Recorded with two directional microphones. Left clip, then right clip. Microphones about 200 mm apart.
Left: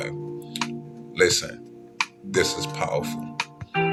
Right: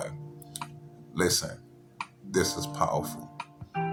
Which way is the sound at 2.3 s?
Centre (ahead or behind).